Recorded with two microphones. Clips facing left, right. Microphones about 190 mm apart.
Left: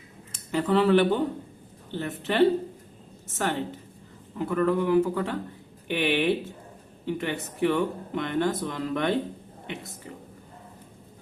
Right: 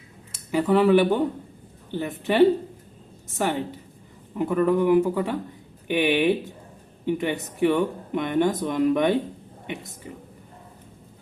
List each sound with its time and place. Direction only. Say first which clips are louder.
0.5 s speech: right 3 dB; 10° right (ahead or behind)